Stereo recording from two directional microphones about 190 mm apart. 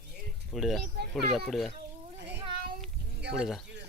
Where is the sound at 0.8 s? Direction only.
60° right (ahead or behind).